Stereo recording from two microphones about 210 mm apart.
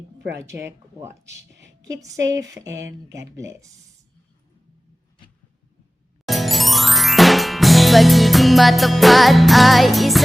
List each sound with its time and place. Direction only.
0.6 s speech: 15° right (ahead or behind)
1.3 s a sound: 55° right (ahead or behind)
1.8 s speech: 15° right (ahead or behind)
6.2 s music: centre (ahead or behind)